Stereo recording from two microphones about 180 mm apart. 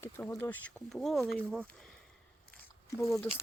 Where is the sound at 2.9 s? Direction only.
15° left (ahead or behind).